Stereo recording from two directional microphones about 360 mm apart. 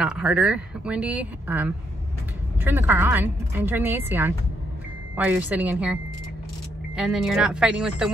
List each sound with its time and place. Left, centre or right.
0.0 s a woman's voice: centre
7.0 s a woman's voice: centre